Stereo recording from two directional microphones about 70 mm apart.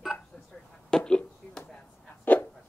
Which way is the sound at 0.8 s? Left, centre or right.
Centre.